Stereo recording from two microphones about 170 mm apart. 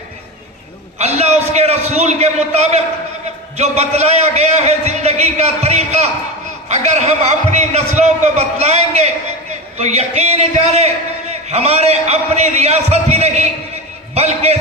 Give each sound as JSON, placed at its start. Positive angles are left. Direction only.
{"t": 0.9, "sound": "a man's voice", "side_deg": -40}